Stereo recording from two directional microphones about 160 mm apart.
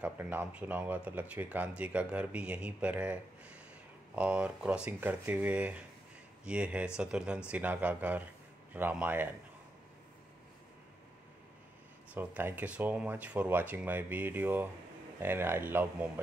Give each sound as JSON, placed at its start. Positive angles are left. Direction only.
{"t": 0.0, "sound": "speech", "side_deg": -10}
{"t": 12.1, "sound": "speech", "side_deg": -10}